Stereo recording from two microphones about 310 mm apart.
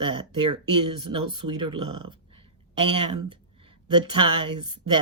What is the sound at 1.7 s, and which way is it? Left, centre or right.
Speech, centre.